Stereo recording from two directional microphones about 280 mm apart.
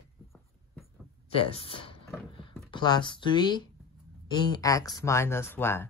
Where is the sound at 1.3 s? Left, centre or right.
Centre.